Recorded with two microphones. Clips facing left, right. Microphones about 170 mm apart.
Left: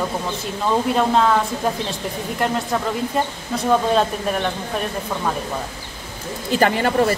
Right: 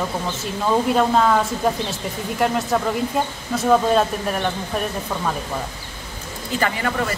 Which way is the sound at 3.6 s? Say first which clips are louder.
Right 1 dB; centre (ahead or behind).